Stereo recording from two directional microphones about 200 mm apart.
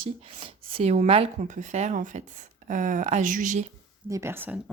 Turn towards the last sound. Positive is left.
turn(degrees=-10)  # may be behind; listen again after turning